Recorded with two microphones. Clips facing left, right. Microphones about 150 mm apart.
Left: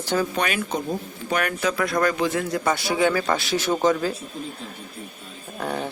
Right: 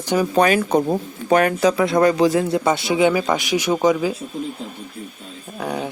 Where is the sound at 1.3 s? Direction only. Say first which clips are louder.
Right 8 dB; 30° right (ahead or behind); by 4.2 s 10° right (ahead or behind).